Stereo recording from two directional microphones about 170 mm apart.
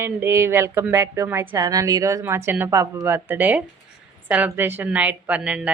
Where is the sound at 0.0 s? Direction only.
15° right (ahead or behind).